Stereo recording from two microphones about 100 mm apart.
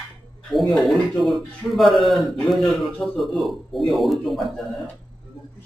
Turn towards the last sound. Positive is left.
turn(degrees=0)  # may be behind; listen again after turning